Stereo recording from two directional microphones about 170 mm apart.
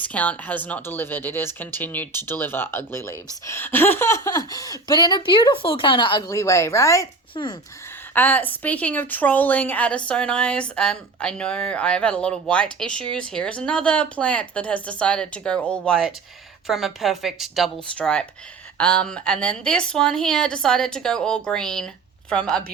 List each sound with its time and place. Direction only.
0.0 s a woman's voice: 10° left (ahead or behind)
8.1 s a woman's voice: 10° left (ahead or behind)